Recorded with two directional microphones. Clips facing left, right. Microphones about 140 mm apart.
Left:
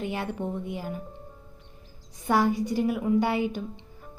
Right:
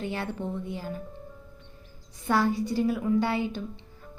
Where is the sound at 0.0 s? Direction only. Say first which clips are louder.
Left 1 dB; 15° left (ahead or behind).